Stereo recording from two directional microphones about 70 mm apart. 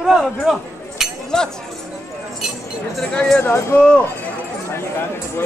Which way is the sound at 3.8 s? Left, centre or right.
Centre.